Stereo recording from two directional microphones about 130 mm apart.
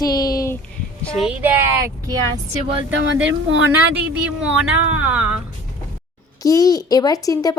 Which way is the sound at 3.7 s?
10° right (ahead or behind).